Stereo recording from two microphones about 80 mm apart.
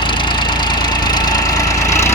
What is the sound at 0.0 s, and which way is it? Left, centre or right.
Engine, left.